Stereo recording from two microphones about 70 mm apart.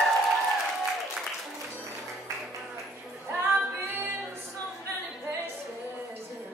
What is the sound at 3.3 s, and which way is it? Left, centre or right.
Female singing, right.